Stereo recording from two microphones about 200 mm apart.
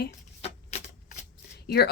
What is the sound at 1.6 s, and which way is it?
Speech, 50° left (ahead or behind).